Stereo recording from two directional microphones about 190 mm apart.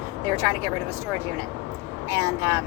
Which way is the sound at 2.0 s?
15° right (ahead or behind).